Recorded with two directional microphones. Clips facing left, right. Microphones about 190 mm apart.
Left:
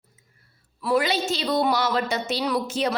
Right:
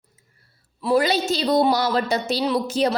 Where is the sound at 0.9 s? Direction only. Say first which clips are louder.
Right 3 dB; 35° right (ahead or behind).